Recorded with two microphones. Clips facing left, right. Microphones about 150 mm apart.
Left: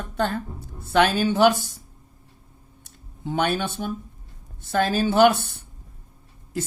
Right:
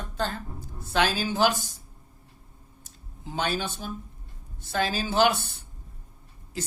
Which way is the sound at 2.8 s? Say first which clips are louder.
Left 9 dB; 60° left (ahead or behind).